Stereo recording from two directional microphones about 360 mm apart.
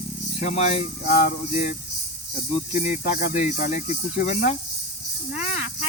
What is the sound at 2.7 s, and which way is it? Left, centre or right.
Speech, centre.